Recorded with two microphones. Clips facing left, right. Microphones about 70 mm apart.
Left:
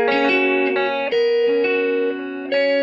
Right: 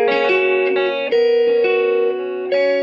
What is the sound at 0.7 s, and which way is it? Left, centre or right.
Music, left.